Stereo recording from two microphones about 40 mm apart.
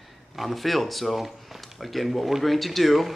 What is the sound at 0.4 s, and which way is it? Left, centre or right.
Speech, centre.